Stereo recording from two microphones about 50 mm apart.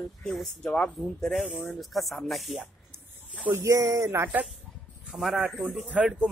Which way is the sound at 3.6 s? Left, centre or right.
Right.